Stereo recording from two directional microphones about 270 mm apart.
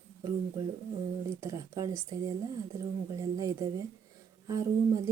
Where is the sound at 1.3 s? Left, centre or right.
Centre.